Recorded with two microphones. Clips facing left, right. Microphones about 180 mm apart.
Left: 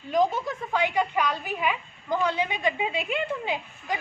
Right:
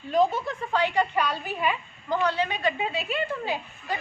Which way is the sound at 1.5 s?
10° left (ahead or behind).